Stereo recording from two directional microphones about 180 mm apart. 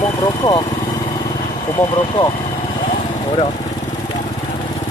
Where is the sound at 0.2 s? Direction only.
20° left (ahead or behind).